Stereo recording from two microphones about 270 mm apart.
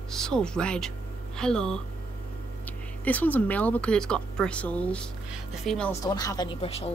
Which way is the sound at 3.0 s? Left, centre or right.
Centre.